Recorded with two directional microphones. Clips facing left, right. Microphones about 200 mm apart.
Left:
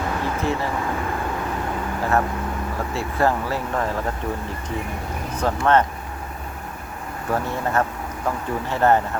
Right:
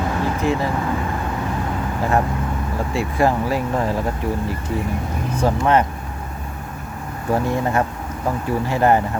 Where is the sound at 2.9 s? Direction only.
15° right (ahead or behind).